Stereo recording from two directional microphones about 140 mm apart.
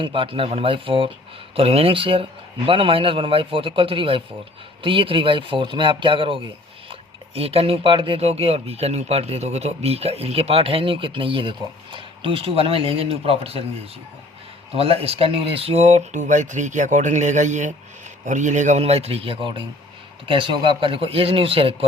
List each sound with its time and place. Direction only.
0.0 s speech: 40° right (ahead or behind)
14.8 s speech: 45° right (ahead or behind)